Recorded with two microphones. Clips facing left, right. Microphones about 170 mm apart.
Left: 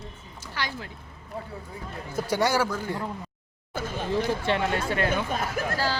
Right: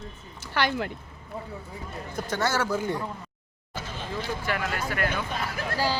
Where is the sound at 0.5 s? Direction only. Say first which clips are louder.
Right 7 dB; 65° right (ahead or behind).